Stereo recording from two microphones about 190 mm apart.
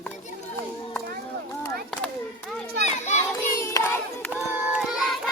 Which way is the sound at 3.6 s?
15° left (ahead or behind).